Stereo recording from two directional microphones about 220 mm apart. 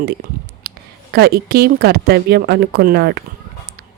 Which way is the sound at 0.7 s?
45° right (ahead or behind).